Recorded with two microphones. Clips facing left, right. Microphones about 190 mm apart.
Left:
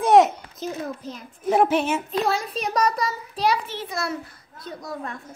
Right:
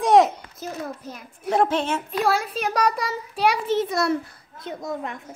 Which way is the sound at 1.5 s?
10° left (ahead or behind).